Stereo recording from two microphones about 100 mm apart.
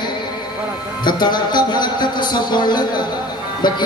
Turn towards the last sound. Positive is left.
turn(degrees=50)  # may be behind; listen again after turning